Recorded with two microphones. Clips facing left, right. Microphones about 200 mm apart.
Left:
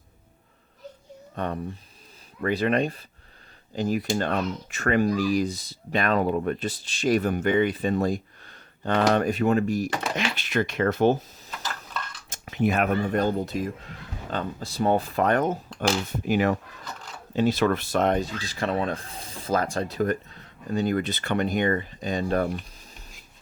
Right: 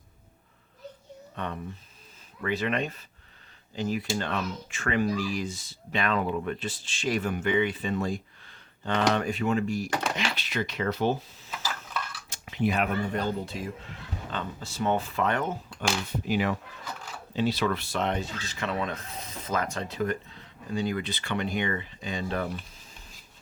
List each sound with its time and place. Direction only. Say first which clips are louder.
2.4 s speech: left 5 dB; 40° left (ahead or behind)